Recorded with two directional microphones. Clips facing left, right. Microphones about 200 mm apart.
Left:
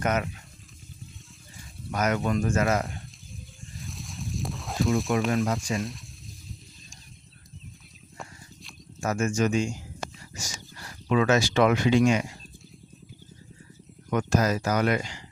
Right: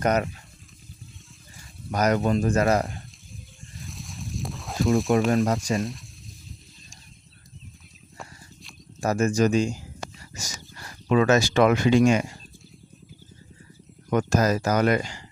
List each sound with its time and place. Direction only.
0.0 s speech: 35° right (ahead or behind)
1.9 s speech: 35° right (ahead or behind)
3.8 s a sound: centre (ahead or behind)
5.7 s speech: centre (ahead or behind)
9.0 s speech: 35° right (ahead or behind)
11.1 s speech: 40° right (ahead or behind)
14.1 s speech: 45° right (ahead or behind)